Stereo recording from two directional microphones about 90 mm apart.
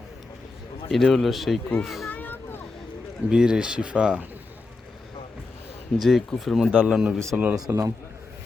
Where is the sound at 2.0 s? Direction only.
20° left (ahead or behind).